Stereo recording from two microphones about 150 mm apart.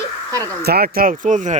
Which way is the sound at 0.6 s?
90° right.